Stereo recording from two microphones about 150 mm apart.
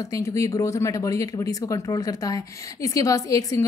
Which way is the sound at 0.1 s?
20° left (ahead or behind).